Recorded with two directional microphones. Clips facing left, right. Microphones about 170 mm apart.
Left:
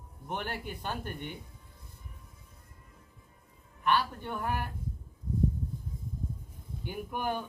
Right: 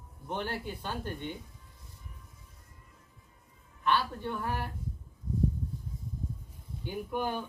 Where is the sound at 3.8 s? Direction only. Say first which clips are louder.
Even; 15° left (ahead or behind).